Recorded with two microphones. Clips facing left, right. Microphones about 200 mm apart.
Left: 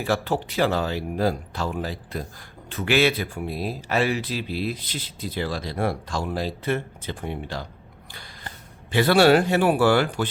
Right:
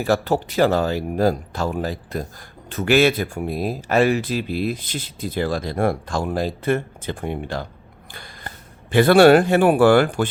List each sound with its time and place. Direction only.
0.0 s speech: 40° right (ahead or behind)